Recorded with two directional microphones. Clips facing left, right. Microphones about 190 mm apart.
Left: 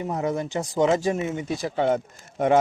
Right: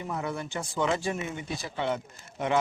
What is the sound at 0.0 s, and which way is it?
Speech, 40° left (ahead or behind).